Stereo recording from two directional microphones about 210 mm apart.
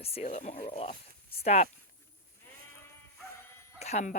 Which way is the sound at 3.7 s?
30° left (ahead or behind).